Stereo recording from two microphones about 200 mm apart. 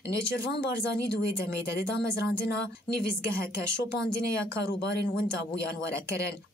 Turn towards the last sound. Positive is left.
turn(degrees=60)  # may be behind; listen again after turning